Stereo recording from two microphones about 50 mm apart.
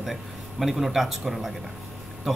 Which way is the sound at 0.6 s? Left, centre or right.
Centre.